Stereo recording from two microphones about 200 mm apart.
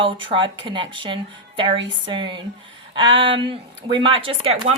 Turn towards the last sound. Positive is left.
turn(degrees=-30)  # may be behind; listen again after turning